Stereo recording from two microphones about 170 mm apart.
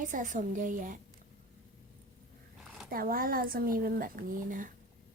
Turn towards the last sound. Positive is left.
turn(degrees=-50)  # may be behind; listen again after turning